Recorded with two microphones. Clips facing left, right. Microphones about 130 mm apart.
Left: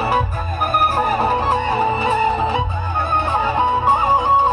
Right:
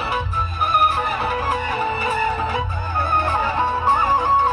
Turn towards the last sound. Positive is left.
turn(degrees=20)  # may be behind; listen again after turning